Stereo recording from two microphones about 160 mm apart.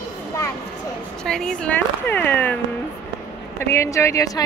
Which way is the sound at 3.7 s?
15° left (ahead or behind).